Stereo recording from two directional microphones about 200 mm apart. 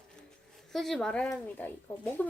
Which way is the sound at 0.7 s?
Centre (ahead or behind).